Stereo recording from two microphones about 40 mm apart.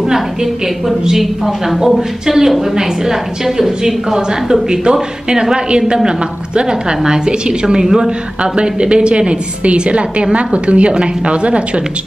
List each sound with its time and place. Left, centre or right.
1.0 s a woman's voice: centre
7.1 s a woman's voice: right
8.5 s a woman's voice: right